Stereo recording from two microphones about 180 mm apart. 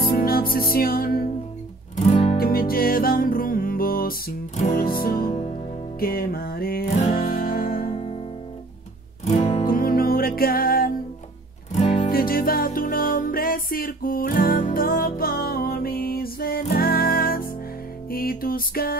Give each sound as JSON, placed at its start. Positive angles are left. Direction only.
{"t": 0.0, "sound": "music", "side_deg": 55}
{"t": 2.0, "sound": "music", "side_deg": 35}
{"t": 2.3, "sound": "music", "side_deg": 55}
{"t": 4.6, "sound": "music", "side_deg": 40}
{"t": 4.9, "sound": "music", "side_deg": 55}
{"t": 7.8, "sound": "music", "side_deg": 35}
{"t": 9.2, "sound": "music", "side_deg": 40}
{"t": 9.7, "sound": "music", "side_deg": 55}
{"t": 11.7, "sound": "music", "side_deg": 45}